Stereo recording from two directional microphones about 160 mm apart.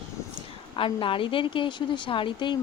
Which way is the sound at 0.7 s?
30° left (ahead or behind).